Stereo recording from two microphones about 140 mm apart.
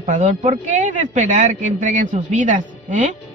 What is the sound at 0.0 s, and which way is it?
Speech, 65° right (ahead or behind).